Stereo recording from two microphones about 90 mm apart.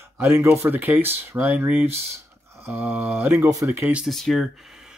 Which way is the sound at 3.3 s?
35° right (ahead or behind).